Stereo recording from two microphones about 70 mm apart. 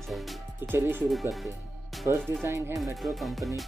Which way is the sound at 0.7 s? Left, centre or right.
Right.